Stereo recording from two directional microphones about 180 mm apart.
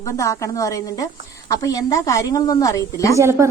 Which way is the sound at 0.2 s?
15° left (ahead or behind).